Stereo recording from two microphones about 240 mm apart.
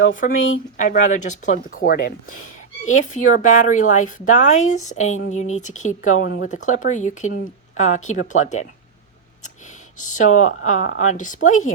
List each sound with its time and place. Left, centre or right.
0.2 s speech: left
9.4 s a sound: left
10.7 s speech: left